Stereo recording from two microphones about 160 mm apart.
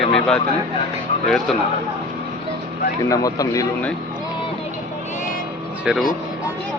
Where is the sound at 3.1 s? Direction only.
20° left (ahead or behind).